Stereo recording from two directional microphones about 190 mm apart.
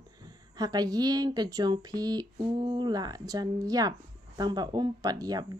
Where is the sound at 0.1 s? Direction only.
20° right (ahead or behind).